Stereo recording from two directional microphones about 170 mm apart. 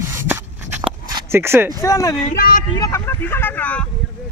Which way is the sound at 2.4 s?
60° left (ahead or behind).